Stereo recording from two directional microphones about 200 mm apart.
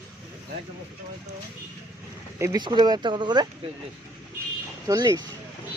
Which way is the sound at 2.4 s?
20° right (ahead or behind).